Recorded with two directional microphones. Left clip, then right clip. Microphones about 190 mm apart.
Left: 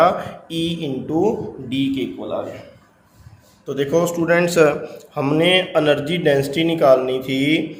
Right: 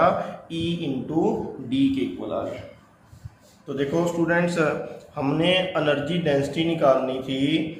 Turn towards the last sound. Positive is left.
turn(degrees=50)  # may be behind; listen again after turning